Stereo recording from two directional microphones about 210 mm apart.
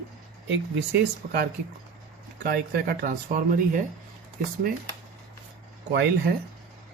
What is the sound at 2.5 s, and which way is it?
Speech, 50° right (ahead or behind).